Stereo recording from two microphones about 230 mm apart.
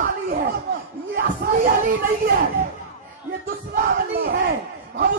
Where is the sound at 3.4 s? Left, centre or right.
Right.